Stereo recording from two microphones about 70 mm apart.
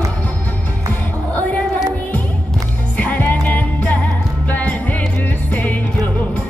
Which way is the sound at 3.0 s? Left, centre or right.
Left.